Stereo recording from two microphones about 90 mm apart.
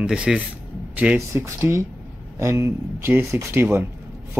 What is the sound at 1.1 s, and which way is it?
Speech, 30° right (ahead or behind).